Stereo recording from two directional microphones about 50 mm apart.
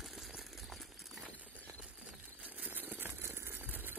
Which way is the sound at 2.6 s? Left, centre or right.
Right.